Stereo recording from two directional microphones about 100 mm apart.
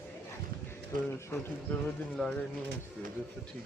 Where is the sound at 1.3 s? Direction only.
30° left (ahead or behind).